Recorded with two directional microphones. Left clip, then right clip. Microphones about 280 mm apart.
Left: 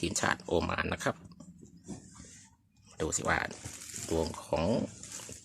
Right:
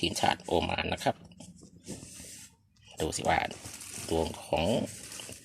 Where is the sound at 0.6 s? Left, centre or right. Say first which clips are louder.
Right 2 dB; centre.